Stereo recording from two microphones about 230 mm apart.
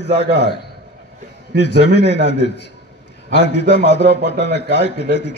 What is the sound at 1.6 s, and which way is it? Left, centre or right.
Speech, left.